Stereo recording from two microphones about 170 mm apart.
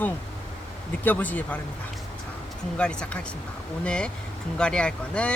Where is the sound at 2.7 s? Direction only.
5° left (ahead or behind).